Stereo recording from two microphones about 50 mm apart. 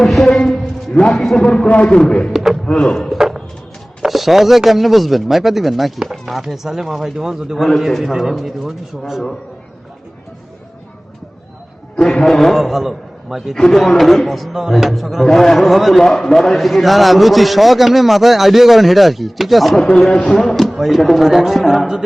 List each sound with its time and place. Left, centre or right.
0.0 s a sound: centre
1.1 s speech: centre
1.6 s speech: left
2.3 s speech: centre
2.7 s speech: centre
3.1 s a sound: centre
4.0 s speech: centre
12.1 s speech: centre
19.8 s speech: centre